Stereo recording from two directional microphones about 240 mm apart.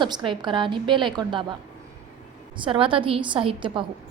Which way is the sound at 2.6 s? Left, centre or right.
Right.